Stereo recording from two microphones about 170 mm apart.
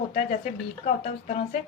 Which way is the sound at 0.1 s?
45° left (ahead or behind).